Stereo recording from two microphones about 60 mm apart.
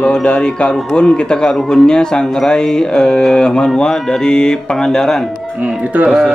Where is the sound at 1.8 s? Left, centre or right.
Centre.